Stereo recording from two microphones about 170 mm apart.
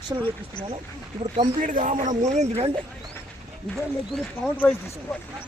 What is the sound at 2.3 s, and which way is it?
Speech, 40° right (ahead or behind).